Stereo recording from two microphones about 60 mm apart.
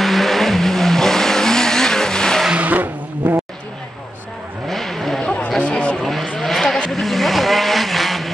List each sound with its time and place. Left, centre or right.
0.0 s vehicle: centre
2.5 s vehicle: right
4.6 s vehicle: centre
5.6 s vehicle: centre
6.0 s vehicle: centre